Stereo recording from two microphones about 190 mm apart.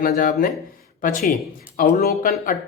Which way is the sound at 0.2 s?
45° left (ahead or behind).